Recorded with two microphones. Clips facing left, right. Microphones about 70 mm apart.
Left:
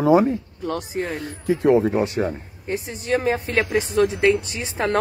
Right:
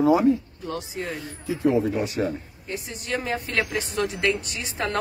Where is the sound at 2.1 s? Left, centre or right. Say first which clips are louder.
Left 2 dB; left.